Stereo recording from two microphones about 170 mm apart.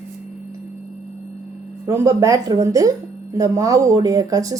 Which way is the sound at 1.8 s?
15° right (ahead or behind).